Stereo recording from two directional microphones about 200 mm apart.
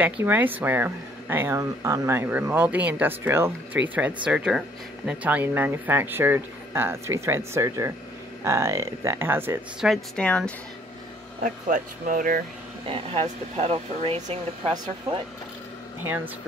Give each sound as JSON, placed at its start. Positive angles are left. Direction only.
{"t": 0.0, "sound": "speech", "side_deg": -10}
{"t": 9.8, "sound": "speech", "side_deg": 5}
{"t": 11.4, "sound": "speech", "side_deg": -40}
{"t": 12.8, "sound": "speech", "side_deg": -30}